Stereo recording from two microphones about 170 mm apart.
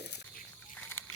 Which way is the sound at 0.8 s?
10° left (ahead or behind).